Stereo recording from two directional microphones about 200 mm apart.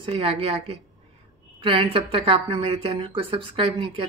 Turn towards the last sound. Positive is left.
turn(degrees=-25)  # may be behind; listen again after turning